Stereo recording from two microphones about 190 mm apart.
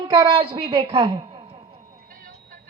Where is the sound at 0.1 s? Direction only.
25° right (ahead or behind).